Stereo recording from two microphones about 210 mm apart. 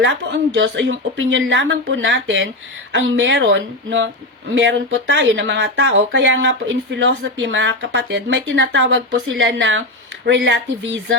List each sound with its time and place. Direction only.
0.0 s speech: 55° right (ahead or behind)